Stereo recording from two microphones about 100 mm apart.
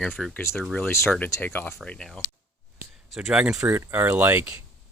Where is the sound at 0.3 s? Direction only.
20° left (ahead or behind).